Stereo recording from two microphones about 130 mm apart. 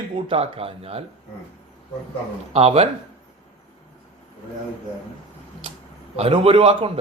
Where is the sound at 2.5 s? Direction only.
50° right (ahead or behind).